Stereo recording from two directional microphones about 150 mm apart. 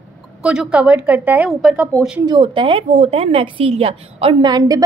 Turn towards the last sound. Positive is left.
turn(degrees=-40)  # may be behind; listen again after turning